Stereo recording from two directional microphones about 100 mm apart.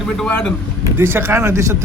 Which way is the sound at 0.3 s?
15° left (ahead or behind).